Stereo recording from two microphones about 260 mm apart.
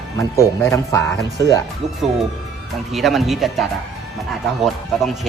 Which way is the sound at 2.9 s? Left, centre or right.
Centre.